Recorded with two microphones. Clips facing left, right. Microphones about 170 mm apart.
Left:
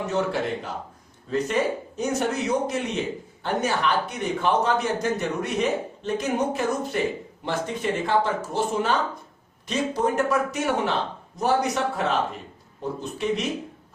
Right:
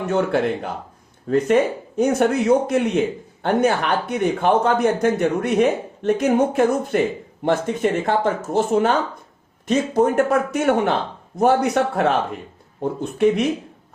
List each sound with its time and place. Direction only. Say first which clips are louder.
0.1 s speech: right 7 dB; 60° right (ahead or behind)